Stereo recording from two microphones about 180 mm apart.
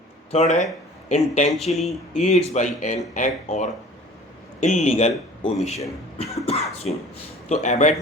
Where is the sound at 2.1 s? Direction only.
40° left (ahead or behind).